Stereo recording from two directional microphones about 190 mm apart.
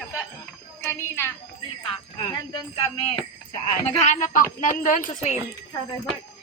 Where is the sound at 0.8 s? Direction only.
15° left (ahead or behind).